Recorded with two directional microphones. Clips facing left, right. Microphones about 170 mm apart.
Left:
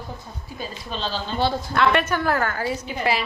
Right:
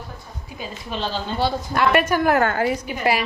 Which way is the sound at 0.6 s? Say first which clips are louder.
Right 2 dB; 15° right (ahead or behind).